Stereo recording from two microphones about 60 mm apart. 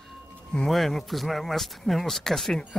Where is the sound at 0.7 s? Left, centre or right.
Centre.